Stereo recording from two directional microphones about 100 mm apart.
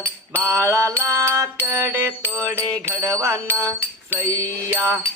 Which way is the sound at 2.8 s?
30° right (ahead or behind).